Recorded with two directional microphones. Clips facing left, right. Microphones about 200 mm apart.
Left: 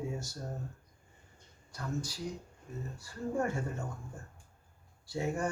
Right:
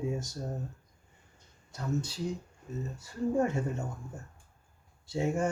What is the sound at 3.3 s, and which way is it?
Speech, 20° right (ahead or behind).